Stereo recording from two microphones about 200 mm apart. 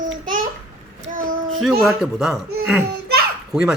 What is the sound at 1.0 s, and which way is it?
Child singing, 40° right (ahead or behind).